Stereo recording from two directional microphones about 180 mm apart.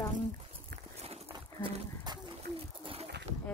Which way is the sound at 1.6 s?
25° right (ahead or behind).